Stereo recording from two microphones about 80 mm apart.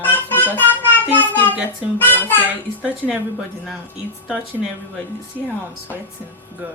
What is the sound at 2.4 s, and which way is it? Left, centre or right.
A woman's voice, right.